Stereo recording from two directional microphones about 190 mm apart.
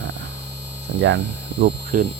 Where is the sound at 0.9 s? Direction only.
70° right (ahead or behind).